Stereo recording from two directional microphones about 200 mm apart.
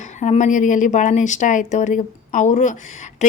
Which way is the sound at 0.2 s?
35° left (ahead or behind).